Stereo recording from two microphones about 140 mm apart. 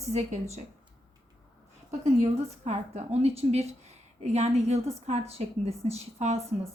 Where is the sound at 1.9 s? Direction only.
50° right (ahead or behind).